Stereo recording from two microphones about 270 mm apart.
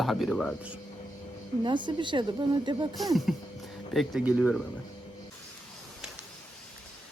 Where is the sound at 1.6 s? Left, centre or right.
Centre.